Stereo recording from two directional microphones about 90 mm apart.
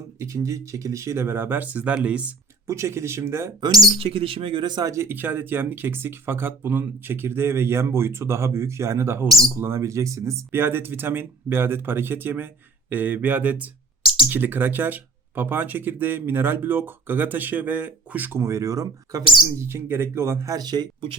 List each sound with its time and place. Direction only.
0.2 s speech: 35° right (ahead or behind); by 2.3 s 15° right (ahead or behind)
2.6 s speech: 30° right (ahead or behind)
3.6 s speech: 45° right (ahead or behind)
3.9 s speech: 90° right; by 20.8 s 45° right (ahead or behind)